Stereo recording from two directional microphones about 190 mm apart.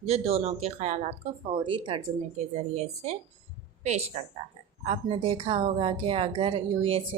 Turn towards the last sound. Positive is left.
turn(degrees=-30)  # may be behind; listen again after turning